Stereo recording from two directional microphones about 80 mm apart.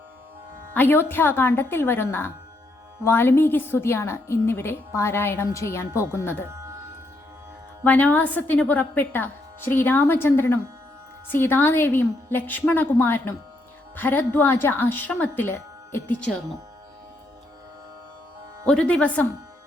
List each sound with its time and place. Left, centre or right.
0.7 s a woman's voice: left
7.9 s speech: centre
18.6 s speech: centre